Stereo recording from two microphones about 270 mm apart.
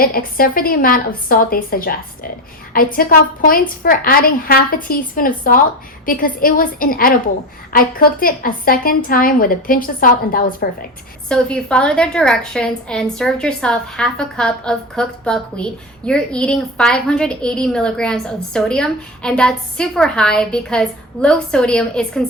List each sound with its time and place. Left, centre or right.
0.0 s a woman's voice: left
11.3 s a woman's voice: centre